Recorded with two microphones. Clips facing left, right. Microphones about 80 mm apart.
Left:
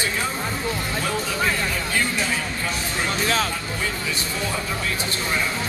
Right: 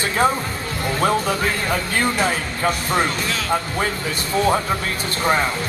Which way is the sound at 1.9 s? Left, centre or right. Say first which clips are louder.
Right 4 dB; right.